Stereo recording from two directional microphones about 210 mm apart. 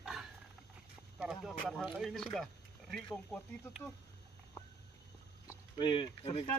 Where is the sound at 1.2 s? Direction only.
Centre (ahead or behind).